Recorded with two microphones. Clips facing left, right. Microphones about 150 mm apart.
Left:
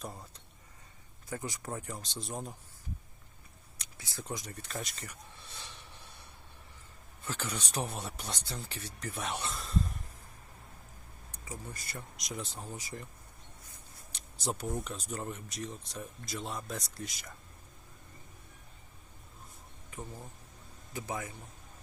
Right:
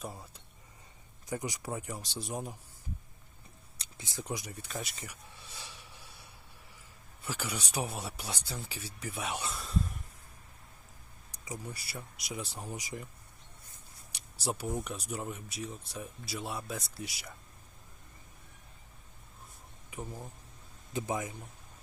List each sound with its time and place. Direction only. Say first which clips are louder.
0.0 s speech: right 1 dB; 5° right (ahead or behind)
1.3 s speech: right 2 dB; 15° right (ahead or behind)
3.8 s speech: right 3 dB; 20° right (ahead or behind)
7.3 s speech: even; 10° right (ahead or behind)
11.3 s speech: right 2 dB; 15° right (ahead or behind)
14.4 s speech: right 1 dB; 5° right (ahead or behind)
19.9 s speech: right 2 dB; 10° right (ahead or behind)